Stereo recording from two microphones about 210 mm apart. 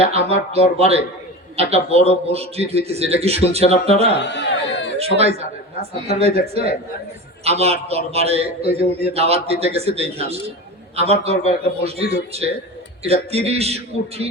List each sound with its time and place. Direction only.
0.1 s a man's voice: 30° right (ahead or behind)
4.2 s a sound: 55° left (ahead or behind)
4.9 s a man's voice: 30° right (ahead or behind)